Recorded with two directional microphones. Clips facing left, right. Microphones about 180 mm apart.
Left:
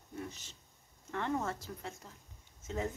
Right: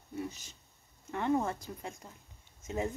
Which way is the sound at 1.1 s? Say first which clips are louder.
Right 5 dB; 15° right (ahead or behind).